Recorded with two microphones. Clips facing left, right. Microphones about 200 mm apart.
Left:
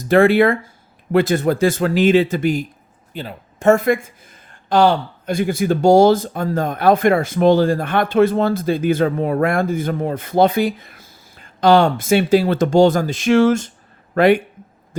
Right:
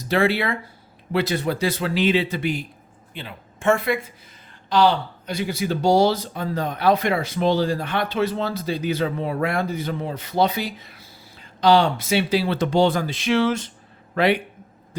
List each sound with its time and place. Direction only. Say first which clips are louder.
0.0 s speech: left 9 dB; 50° left (ahead or behind)